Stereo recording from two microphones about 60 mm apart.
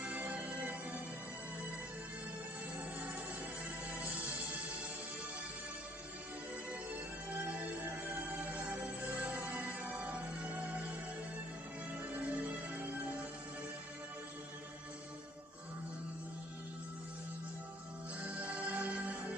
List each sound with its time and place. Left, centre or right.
0.0 s music: right
3.9 s music: right
6.7 s music: right
12.1 s music: right
18.2 s music: right